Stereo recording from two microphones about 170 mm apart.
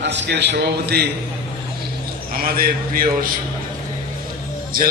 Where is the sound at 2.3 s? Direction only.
60° right (ahead or behind).